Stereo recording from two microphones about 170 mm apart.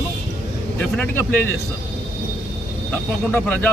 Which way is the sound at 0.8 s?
10° left (ahead or behind).